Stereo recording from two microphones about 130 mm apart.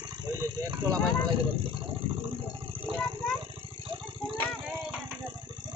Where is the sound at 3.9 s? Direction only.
40° right (ahead or behind).